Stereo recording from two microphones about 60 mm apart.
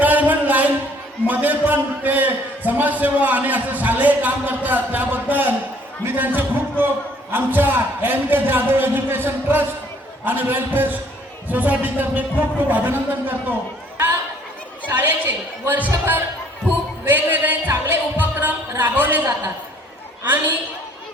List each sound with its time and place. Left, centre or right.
0.0 s a sound: right
1.3 s a man's voice: right
14.9 s a man's voice: right
17.1 s a man's voice: right
17.7 s music: right
18.2 s music: right
18.8 s a man's voice: right